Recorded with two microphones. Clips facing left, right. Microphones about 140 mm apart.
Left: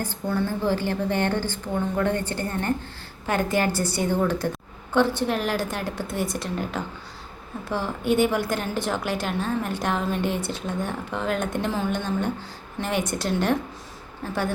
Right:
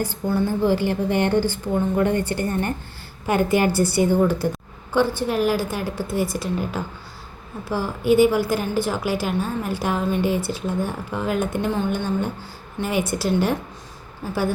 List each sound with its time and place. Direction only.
0.0 s a woman's voice: 10° right (ahead or behind)